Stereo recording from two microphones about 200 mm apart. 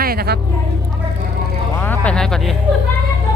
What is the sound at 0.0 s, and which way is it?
Vehicle, 50° right (ahead or behind).